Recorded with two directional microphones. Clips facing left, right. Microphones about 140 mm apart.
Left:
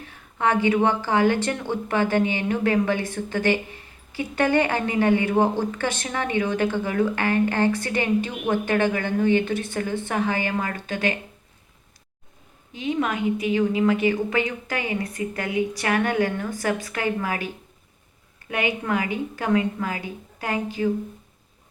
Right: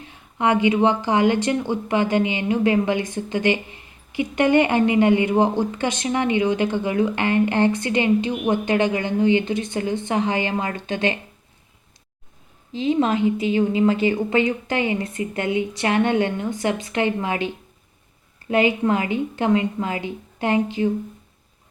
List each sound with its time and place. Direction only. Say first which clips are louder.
0.0 s speech: right 2 dB; 20° right (ahead or behind)
12.7 s speech: right 5 dB; 30° right (ahead or behind)